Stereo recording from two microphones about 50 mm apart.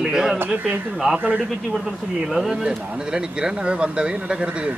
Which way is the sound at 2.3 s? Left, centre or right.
Centre.